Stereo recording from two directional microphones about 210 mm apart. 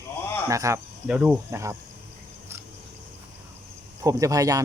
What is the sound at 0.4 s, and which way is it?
Speech, 15° right (ahead or behind).